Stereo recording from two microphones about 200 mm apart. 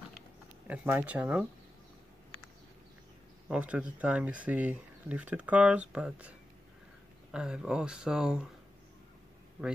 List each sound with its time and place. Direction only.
0.7 s speech: 10° right (ahead or behind)
3.4 s speech: 5° right (ahead or behind)